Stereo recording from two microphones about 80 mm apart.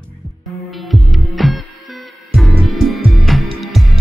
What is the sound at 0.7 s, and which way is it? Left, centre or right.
Music, centre.